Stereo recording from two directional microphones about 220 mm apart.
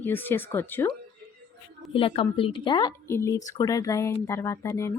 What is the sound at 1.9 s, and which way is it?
Speech, 25° left (ahead or behind).